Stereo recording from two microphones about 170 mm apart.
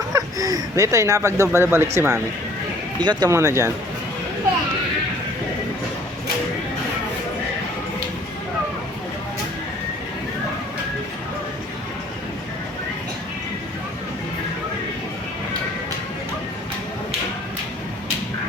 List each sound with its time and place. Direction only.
0.1 s speech: 20° right (ahead or behind)